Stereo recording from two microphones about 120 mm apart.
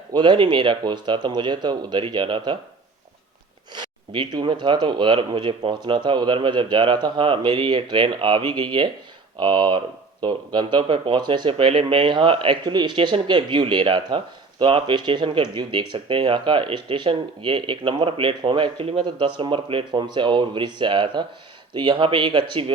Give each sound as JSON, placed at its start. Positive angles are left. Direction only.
{"t": 0.1, "sound": "speech", "side_deg": -40}
{"t": 3.8, "sound": "speech", "side_deg": -40}
{"t": 19.0, "sound": "speech", "side_deg": -40}